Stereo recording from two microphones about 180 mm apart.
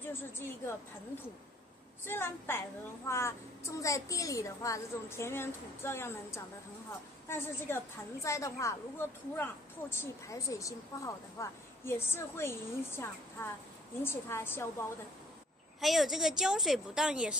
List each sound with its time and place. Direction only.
0.1 s a woman's voice: 10° left (ahead or behind)
2.0 s a woman's voice: 10° left (ahead or behind)
15.8 s a woman's voice: centre (ahead or behind)